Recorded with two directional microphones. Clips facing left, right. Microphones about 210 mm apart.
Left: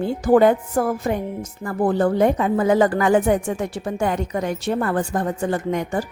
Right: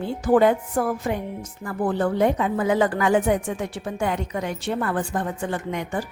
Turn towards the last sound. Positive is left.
turn(degrees=40)  # may be behind; listen again after turning